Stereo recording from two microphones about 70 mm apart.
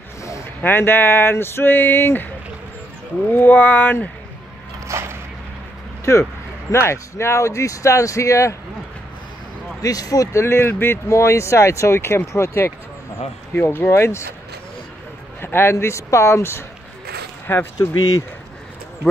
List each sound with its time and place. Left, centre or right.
0.6 s speech: left
3.3 s speech: left
4.8 s a sound: right
6.1 s speech: left
9.8 s speech: left
10.4 s speech: left
15.4 s speech: left
17.7 s speech: left